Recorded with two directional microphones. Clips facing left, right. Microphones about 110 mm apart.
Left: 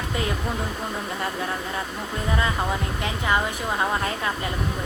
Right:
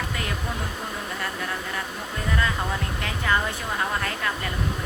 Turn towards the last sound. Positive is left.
turn(degrees=20)  # may be behind; listen again after turning